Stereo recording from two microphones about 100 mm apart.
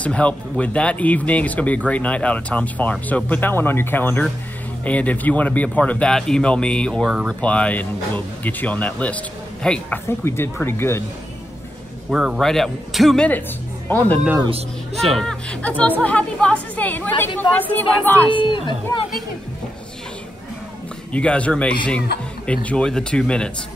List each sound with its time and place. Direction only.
0.0 s speech: 10° left (ahead or behind)
10.0 s speech: 25° left (ahead or behind)
12.1 s a man's voice: 5° right (ahead or behind)
12.4 s a man's voice: 5° left (ahead or behind)
13.8 s speech: 15° left (ahead or behind)
15.0 s speech: 5° left (ahead or behind)
18.3 s speech: 55° left (ahead or behind)
21.1 s speech: 10° left (ahead or behind)